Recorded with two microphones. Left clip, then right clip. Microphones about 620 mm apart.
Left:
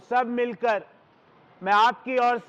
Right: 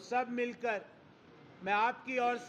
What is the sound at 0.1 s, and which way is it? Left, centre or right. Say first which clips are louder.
A man's voice: left 10 dB; left.